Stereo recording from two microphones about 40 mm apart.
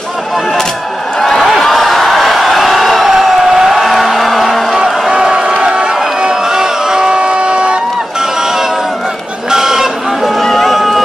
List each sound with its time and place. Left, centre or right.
1.6 s a sound: centre
4.7 s music: centre
5.1 s crowd: right
9.5 s chicken: centre
10.4 s run: centre